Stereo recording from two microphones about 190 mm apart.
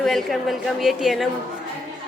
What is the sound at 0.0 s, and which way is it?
A woman's voice, centre (ahead or behind).